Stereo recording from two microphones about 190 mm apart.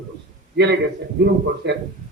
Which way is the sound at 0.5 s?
65° right (ahead or behind).